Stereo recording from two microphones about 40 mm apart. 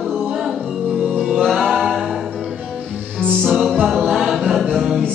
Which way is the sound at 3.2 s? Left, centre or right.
Left.